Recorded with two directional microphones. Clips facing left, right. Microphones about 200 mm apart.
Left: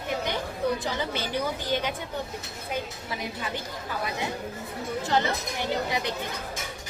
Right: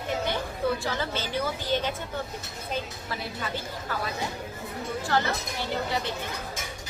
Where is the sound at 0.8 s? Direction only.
15° left (ahead or behind).